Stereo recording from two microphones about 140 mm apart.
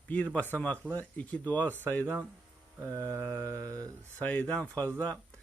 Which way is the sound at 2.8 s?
20° right (ahead or behind).